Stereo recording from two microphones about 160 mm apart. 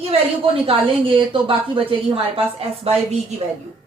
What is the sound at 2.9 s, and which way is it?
Speech, 40° right (ahead or behind).